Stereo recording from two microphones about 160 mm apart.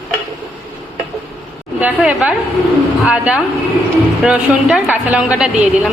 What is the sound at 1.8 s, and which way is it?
A woman's voice, 10° right (ahead or behind).